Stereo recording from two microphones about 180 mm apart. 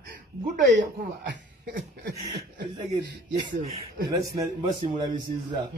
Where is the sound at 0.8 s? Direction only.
65° right (ahead or behind).